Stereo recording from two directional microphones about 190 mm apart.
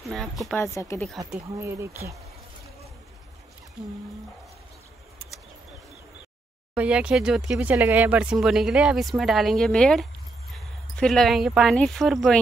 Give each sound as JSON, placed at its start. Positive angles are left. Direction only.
{"t": 0.1, "sound": "speech", "side_deg": 0}
{"t": 0.7, "sound": "speech", "side_deg": 15}
{"t": 1.3, "sound": "speech", "side_deg": -15}
{"t": 6.7, "sound": "speech", "side_deg": -5}